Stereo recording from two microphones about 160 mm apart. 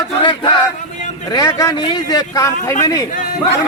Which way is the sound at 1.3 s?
20° left (ahead or behind).